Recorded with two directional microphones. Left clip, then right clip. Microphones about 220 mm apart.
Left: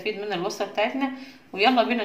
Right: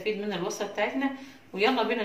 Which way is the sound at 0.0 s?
45° left (ahead or behind).